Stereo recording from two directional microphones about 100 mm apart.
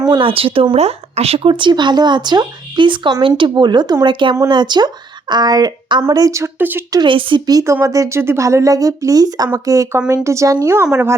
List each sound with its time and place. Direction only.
0.2 s speech: 65° right (ahead or behind)
0.8 s speech: 90° right; by 6.8 s 20° right (ahead or behind)
6.9 s speech: 55° right (ahead or behind)
7.6 s speech: 30° right (ahead or behind)